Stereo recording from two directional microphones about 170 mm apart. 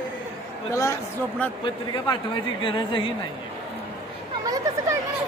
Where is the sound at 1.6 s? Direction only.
30° left (ahead or behind).